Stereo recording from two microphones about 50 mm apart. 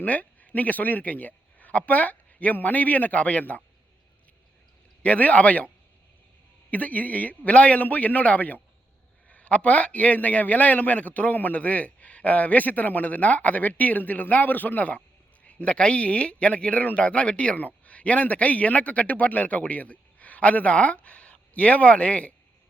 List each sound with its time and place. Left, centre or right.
0.0 s speech: left
5.0 s a man's voice: left
6.7 s a man's voice: left